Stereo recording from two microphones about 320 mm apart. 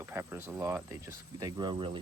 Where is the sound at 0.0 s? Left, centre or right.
Centre.